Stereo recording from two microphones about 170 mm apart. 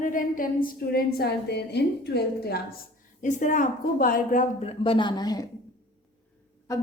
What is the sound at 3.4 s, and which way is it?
A woman's voice, 50° left (ahead or behind).